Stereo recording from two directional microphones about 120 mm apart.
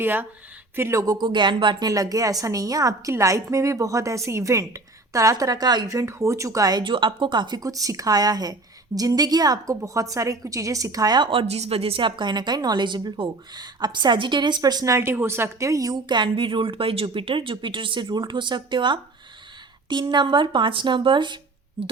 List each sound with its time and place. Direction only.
0.0 s speech: 15° right (ahead or behind); by 11.3 s 35° right (ahead or behind)
11.3 s a woman's voice: 55° right (ahead or behind)